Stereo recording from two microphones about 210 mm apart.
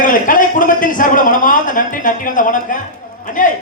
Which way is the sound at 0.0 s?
40° left (ahead or behind).